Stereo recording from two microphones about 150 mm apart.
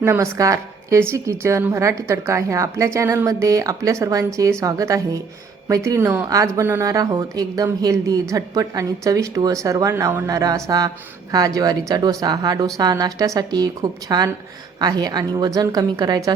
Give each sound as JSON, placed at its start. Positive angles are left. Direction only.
{"t": 0.0, "sound": "a woman's voice", "side_deg": -20}